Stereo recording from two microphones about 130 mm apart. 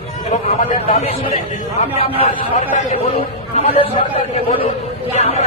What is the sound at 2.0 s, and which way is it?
Speech, 50° left (ahead or behind).